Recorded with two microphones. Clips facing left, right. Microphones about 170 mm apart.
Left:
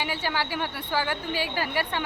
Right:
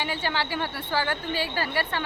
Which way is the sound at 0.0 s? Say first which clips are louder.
Even; 10° left (ahead or behind).